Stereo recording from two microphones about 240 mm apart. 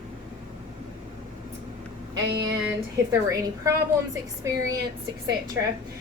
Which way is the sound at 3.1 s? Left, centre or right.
Centre.